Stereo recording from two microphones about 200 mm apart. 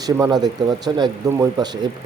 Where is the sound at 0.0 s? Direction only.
20° right (ahead or behind).